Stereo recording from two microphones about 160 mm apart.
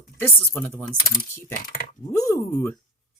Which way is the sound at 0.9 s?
70° left (ahead or behind).